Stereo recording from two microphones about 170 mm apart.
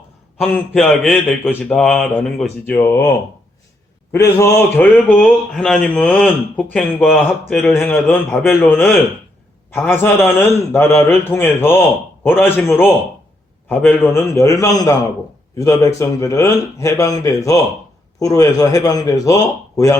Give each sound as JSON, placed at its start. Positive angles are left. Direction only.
{"t": 0.3, "sound": "a man's voice", "side_deg": 0}
{"t": 4.1, "sound": "a man's voice", "side_deg": 15}